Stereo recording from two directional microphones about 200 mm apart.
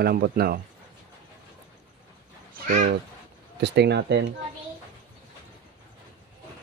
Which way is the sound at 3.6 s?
60° right (ahead or behind).